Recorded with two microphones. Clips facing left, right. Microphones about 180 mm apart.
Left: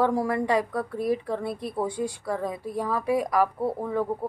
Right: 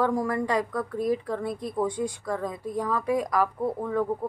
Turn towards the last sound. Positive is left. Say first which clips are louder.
# even
turn(degrees=5)  # may be behind; listen again after turning